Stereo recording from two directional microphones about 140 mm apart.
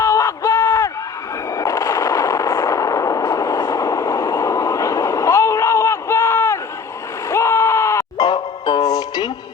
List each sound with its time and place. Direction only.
0.0 s a sound: 25° left (ahead or behind)
1.5 s artillery fire: 25° left (ahead or behind)
7.3 s music: 20° left (ahead or behind)